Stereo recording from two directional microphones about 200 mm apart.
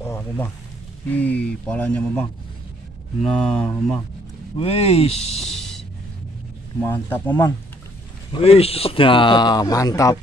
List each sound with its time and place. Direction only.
0.0 s a sound: 10° left (ahead or behind)
1.0 s speech: 5° left (ahead or behind)
4.6 s speech: 30° left (ahead or behind)
5.5 s a sound: centre (ahead or behind)
6.8 s speech: 10° left (ahead or behind)
8.3 s a man's voice: 30° left (ahead or behind)